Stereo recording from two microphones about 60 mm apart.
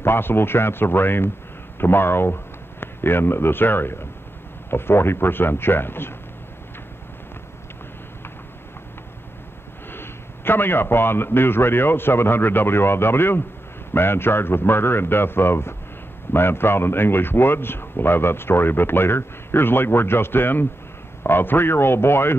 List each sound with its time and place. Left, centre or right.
0.0 s a man's voice: left
9.9 s a man's voice: left